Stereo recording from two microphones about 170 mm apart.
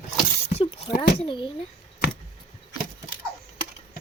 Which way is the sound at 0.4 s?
35° left (ahead or behind).